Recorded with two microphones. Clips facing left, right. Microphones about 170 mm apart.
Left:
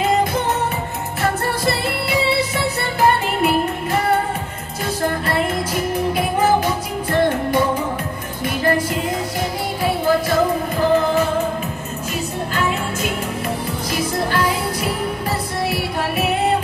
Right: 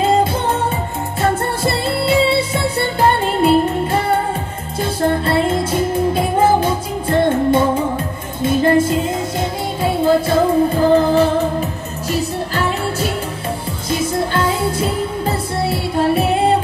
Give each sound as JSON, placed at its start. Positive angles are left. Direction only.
{"t": 0.0, "sound": "music", "side_deg": -30}
{"t": 13.8, "sound": "music", "side_deg": -25}